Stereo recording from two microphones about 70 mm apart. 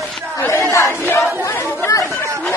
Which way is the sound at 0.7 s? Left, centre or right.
Left.